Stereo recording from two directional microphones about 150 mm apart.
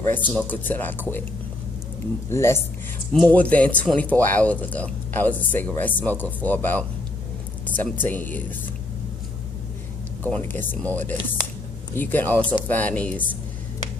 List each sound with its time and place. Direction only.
0.0 s speech: 10° left (ahead or behind)
2.2 s speech: 15° left (ahead or behind)
3.1 s speech: 5° left (ahead or behind)
10.2 s speech: 10° left (ahead or behind)